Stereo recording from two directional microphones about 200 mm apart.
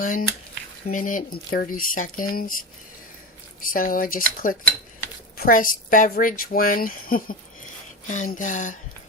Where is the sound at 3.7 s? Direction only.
45° left (ahead or behind).